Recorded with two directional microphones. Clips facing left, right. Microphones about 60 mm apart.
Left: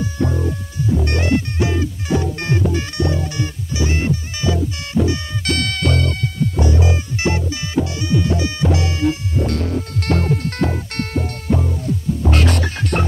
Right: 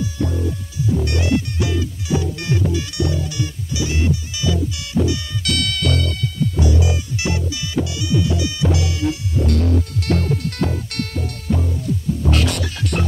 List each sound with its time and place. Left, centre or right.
0.0 s music: left